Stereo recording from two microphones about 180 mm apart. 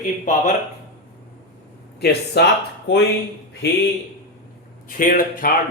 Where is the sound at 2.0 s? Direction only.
65° left (ahead or behind).